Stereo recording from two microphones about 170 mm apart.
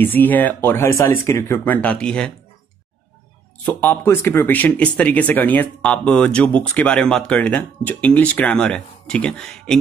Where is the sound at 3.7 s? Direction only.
10° left (ahead or behind).